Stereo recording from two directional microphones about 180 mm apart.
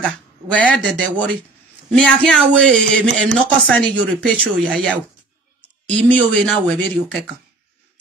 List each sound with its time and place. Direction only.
0.0 s speech: 5° left (ahead or behind)